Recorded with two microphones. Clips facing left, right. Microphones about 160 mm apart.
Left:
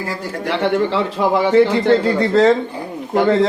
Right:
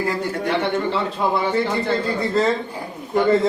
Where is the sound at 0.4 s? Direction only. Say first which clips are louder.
Left 5 dB; 85° left.